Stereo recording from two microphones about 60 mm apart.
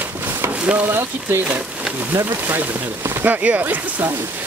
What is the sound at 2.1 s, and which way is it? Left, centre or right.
Speech, right.